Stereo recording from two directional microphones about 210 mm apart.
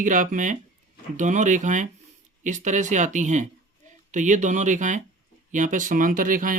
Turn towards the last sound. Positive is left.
turn(degrees=-40)  # may be behind; listen again after turning